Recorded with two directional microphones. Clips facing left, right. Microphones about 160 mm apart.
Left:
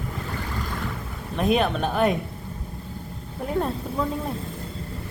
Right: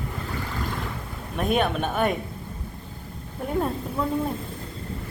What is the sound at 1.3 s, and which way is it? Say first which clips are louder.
Speech: left 2 dB; centre (ahead or behind).